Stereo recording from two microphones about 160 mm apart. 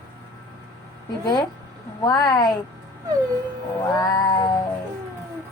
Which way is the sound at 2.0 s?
25° left (ahead or behind).